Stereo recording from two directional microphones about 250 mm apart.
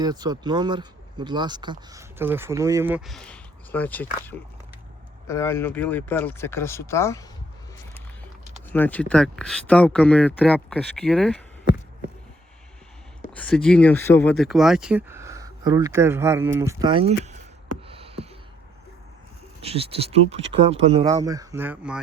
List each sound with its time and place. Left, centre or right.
0.0 s speech: centre
8.7 s speech: centre
13.3 s speech: centre; by 17.2 s right
17.8 s a sound: right
19.6 s speech: right; by 22.0 s centre